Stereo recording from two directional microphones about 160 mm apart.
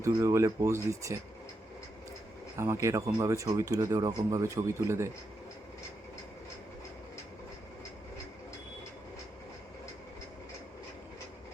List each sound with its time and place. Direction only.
0.0 s speech: 20° right (ahead or behind)
2.6 s speech: 15° right (ahead or behind)